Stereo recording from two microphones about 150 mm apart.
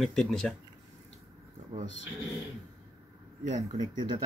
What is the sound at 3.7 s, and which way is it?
Speech, 30° right (ahead or behind).